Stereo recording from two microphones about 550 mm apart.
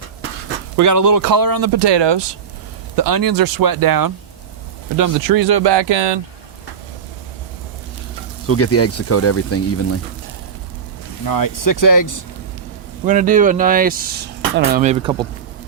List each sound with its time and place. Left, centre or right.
0.8 s speech: right
2.9 s speech: right
8.4 s speech: left
11.3 s speech: left
13.1 s speech: centre